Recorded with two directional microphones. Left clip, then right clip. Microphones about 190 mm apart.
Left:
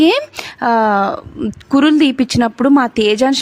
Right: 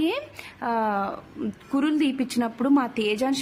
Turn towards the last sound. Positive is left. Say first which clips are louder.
# left 12 dB
turn(degrees=40)  # may be behind; listen again after turning